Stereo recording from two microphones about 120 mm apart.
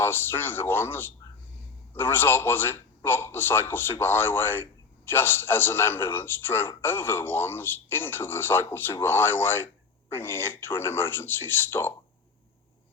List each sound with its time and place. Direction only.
0.0 s a man's voice: 20° left (ahead or behind)